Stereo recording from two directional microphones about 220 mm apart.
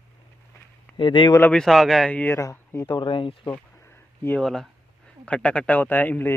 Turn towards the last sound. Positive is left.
turn(degrees=10)  # may be behind; listen again after turning